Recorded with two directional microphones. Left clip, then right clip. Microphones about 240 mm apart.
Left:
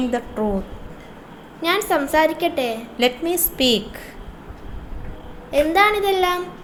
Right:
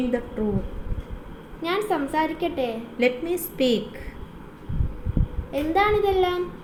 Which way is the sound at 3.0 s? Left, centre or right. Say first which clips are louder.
Left 3 dB; centre.